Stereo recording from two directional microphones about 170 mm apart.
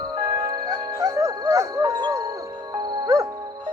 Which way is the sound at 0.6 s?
20° right (ahead or behind).